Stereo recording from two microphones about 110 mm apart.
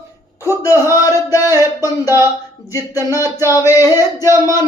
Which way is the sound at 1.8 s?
25° right (ahead or behind).